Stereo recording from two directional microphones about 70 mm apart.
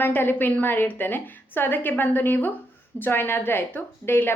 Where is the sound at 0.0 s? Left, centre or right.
Left.